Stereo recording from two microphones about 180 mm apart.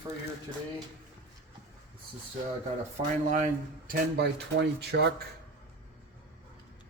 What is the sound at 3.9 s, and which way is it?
Speech, 65° right (ahead or behind).